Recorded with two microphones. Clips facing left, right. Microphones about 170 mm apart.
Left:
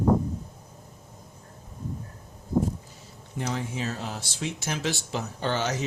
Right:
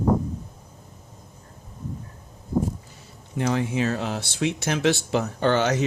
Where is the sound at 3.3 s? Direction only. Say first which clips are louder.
Right 7 dB; 75° right (ahead or behind).